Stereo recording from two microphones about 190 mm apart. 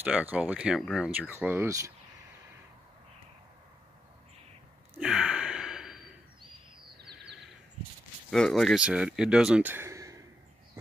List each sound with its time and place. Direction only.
0.0 s speech: 10° right (ahead or behind)
4.9 s gasp: 5° right (ahead or behind)
7.0 s a sound: 60° right (ahead or behind)
8.3 s speech: centre (ahead or behind); by 10.2 s 15° right (ahead or behind)